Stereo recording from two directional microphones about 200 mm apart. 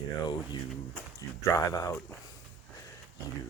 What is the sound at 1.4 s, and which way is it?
Speech, 15° left (ahead or behind).